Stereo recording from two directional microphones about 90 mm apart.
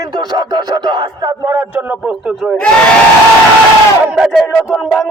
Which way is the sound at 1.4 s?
30° right (ahead or behind).